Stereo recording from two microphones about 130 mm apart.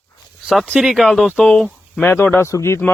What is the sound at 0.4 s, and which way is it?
Speech, centre (ahead or behind).